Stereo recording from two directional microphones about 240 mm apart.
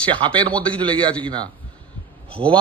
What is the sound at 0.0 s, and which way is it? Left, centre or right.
A woman's voice, right.